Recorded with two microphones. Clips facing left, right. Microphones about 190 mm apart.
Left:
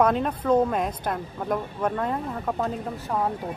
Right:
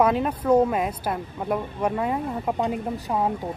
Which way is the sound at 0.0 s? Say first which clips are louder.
Right 1 dB; 5° right (ahead or behind).